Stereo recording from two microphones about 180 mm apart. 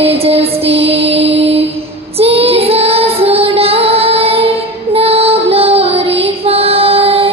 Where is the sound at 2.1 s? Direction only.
35° right (ahead or behind).